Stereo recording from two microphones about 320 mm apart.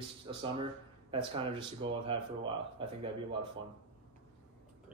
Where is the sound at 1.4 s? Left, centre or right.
Centre.